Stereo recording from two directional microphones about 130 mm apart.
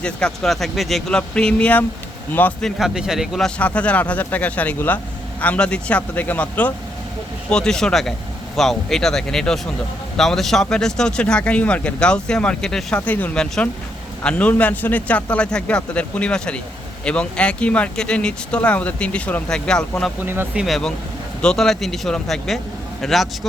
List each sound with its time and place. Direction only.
0.0 s a man's voice: 5° left (ahead or behind)
20.2 s speech: 15° right (ahead or behind)
20.6 s a man's voice: centre (ahead or behind)